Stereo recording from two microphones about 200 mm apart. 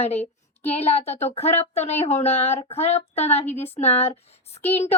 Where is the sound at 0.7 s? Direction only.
30° left (ahead or behind).